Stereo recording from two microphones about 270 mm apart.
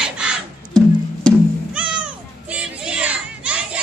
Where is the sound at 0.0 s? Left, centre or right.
Centre.